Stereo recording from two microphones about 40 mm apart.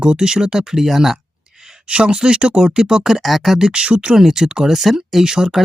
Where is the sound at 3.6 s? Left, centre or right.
Right.